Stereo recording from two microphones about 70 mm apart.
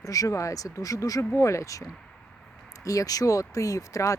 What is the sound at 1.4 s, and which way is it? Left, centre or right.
Speech, left.